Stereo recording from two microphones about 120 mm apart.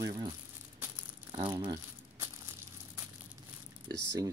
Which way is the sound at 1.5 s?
30° right (ahead or behind).